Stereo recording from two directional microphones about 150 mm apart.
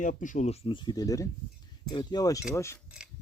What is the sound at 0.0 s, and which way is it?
Speech, 60° left (ahead or behind).